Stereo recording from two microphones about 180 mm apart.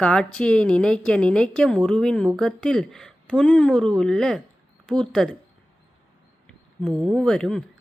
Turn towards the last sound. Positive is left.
turn(degrees=5)  # may be behind; listen again after turning